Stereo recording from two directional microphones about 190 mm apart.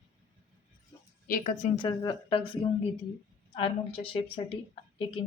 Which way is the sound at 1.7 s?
25° left (ahead or behind).